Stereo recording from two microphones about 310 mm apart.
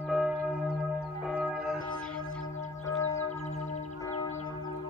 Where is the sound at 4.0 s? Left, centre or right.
Centre.